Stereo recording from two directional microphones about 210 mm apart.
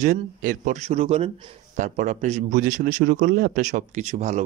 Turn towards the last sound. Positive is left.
turn(degrees=-30)  # may be behind; listen again after turning